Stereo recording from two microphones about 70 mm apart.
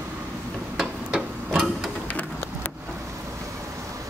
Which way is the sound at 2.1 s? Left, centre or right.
Left.